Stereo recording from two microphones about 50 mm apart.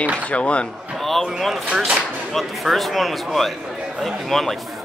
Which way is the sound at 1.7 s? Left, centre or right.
Centre.